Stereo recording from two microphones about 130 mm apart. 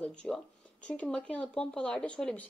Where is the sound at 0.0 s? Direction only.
5° left (ahead or behind).